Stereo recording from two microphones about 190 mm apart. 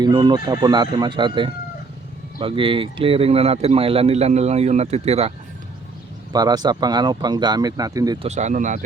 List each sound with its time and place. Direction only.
0.0 s speech: 20° right (ahead or behind)
6.3 s speech: 20° right (ahead or behind)
8.3 s speech: 40° right (ahead or behind)